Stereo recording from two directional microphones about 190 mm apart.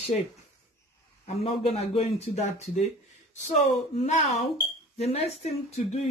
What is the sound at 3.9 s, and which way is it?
Speech, 35° left (ahead or behind).